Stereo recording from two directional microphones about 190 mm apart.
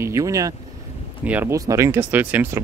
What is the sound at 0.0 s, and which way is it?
Speech, 15° right (ahead or behind).